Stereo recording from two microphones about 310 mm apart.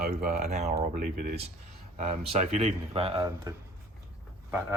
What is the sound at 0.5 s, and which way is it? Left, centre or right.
Speech, right.